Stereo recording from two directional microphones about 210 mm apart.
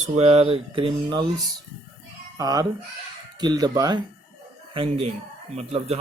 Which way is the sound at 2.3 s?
15° right (ahead or behind).